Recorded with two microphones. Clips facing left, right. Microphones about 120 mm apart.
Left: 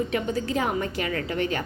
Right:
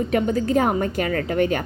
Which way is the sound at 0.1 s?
45° right (ahead or behind).